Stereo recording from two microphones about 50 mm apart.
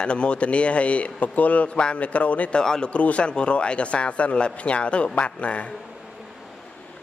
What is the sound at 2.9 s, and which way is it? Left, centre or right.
A man's voice, left.